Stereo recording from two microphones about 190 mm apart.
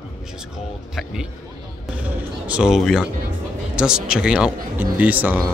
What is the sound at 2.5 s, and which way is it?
Speech, 5° right (ahead or behind).